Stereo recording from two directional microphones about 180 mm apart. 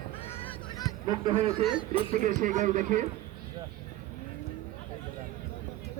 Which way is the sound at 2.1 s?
45° right (ahead or behind).